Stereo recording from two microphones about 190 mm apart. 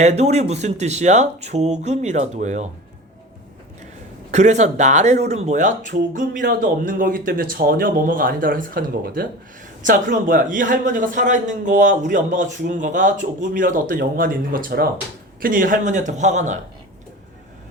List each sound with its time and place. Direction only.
0.0 s speech: 35° right (ahead or behind)
4.3 s a man's voice: 35° right (ahead or behind)